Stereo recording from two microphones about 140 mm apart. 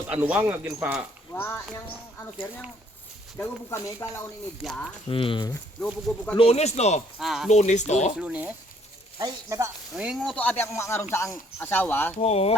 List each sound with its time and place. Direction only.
0.1 s speech: 10° right (ahead or behind)
1.3 s speech: 15° left (ahead or behind)
4.6 s speech: 5° left (ahead or behind)
5.0 s speech: 40° left (ahead or behind)
7.2 s speech: centre (ahead or behind)
7.5 s speech: 55° left (ahead or behind)
8.1 s speech: 10° right (ahead or behind)
9.1 s speech: 20° right (ahead or behind)
9.9 s speech: 5° right (ahead or behind)
10.3 s speech: 15° left (ahead or behind)
12.2 s speech: 45° left (ahead or behind)